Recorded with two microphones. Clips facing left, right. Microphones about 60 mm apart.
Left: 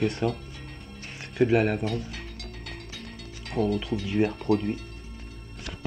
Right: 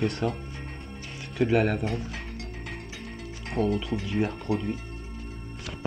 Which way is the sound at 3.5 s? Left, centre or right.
Centre.